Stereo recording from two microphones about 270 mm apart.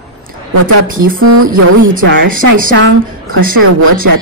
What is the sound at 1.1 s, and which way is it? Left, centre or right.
A woman's voice, right.